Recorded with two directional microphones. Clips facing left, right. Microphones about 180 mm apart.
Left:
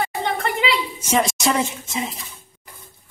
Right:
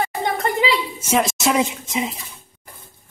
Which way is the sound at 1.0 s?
5° right (ahead or behind).